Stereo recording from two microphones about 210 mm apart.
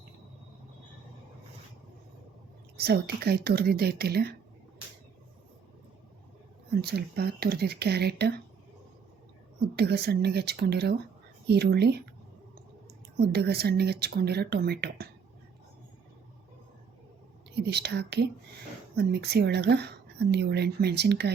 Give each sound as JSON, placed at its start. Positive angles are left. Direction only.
{"t": 2.7, "sound": "speech", "side_deg": -50}
{"t": 6.9, "sound": "speech", "side_deg": -45}
{"t": 9.7, "sound": "speech", "side_deg": -50}
{"t": 13.1, "sound": "speech", "side_deg": -50}
{"t": 17.5, "sound": "speech", "side_deg": -50}